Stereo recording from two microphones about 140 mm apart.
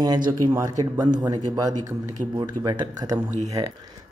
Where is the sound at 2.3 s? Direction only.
25° right (ahead or behind).